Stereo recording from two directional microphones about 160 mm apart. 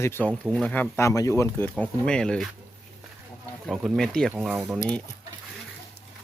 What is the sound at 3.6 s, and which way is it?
Speech, centre (ahead or behind).